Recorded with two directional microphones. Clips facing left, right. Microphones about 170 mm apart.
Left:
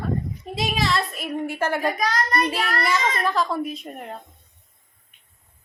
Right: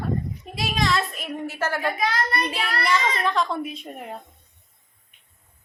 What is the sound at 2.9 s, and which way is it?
A child's voice, 5° left (ahead or behind).